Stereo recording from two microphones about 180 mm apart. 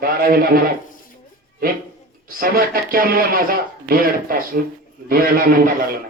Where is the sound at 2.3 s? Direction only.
55° right (ahead or behind).